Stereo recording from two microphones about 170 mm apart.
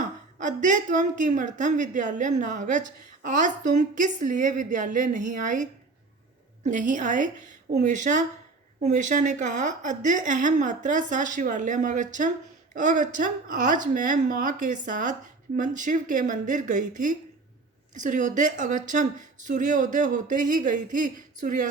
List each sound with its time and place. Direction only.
0.3 s a woman's voice: 50° right (ahead or behind)
6.7 s a woman's voice: 50° right (ahead or behind)